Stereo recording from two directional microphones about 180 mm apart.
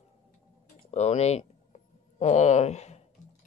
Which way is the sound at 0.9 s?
35° left (ahead or behind).